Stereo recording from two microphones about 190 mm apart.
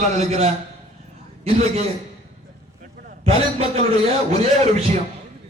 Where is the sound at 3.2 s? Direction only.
30° right (ahead or behind).